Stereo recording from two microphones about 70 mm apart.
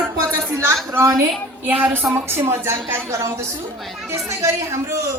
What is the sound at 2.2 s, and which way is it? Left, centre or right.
A man's voice, right.